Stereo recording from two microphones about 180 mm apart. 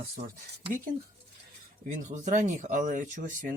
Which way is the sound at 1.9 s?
40° right (ahead or behind).